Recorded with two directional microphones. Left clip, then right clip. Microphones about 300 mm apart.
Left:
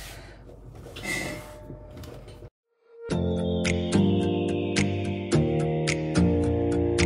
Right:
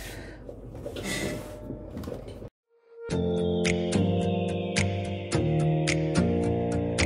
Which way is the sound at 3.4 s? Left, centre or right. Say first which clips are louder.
Right 1 dB; centre.